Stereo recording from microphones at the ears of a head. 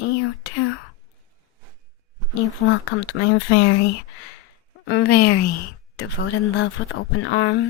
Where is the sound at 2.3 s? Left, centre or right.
Left.